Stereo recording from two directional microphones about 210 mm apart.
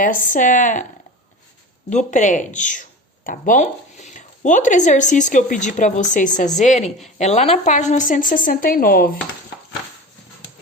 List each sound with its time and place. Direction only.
0.0 s speech: 40° left (ahead or behind)
1.9 s speech: 35° left (ahead or behind)